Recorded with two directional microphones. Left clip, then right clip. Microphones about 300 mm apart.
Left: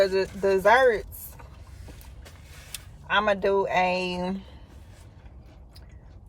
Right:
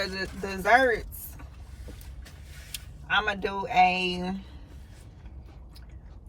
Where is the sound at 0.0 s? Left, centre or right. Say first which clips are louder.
Left 10 dB; centre.